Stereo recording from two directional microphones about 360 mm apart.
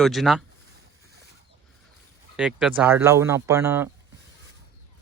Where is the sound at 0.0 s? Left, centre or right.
Centre.